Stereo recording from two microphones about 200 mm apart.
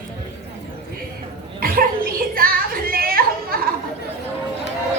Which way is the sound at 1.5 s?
45° right (ahead or behind).